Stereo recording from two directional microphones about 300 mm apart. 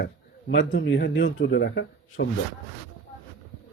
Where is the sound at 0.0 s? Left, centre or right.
Left.